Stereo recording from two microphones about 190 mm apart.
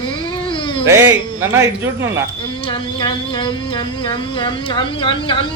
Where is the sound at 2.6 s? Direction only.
25° left (ahead or behind).